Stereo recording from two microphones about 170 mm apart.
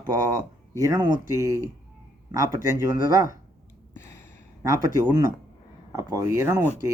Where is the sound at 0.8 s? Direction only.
20° right (ahead or behind).